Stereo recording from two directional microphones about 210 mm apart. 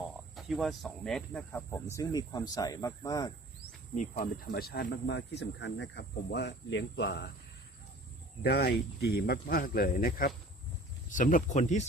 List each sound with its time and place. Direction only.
0.3 s speech: centre (ahead or behind); by 3.3 s 15° left (ahead or behind)
3.9 s speech: 35° left (ahead or behind); by 7.3 s 55° left (ahead or behind)
8.4 s speech: 50° left (ahead or behind)